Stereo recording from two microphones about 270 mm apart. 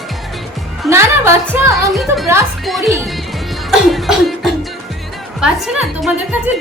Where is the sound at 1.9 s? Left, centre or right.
Centre.